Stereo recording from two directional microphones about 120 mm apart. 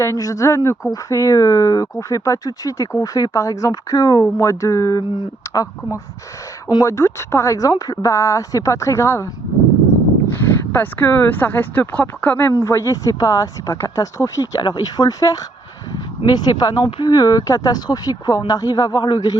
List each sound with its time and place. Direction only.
0.0 s speech: 25° left (ahead or behind)
6.7 s speech: 30° left (ahead or behind)
10.3 s speech: 15° left (ahead or behind); by 19.4 s 35° left (ahead or behind)